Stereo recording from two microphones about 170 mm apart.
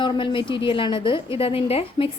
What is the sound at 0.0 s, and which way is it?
A woman's voice, 30° left (ahead or behind).